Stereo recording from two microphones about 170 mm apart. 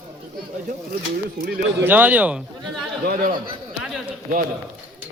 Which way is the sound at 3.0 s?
55° right (ahead or behind).